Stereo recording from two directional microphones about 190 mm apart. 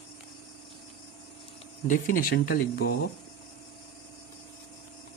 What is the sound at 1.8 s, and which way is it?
Speech, 45° left (ahead or behind).